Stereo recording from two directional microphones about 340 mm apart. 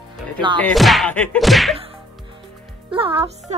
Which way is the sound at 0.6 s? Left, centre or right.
Centre.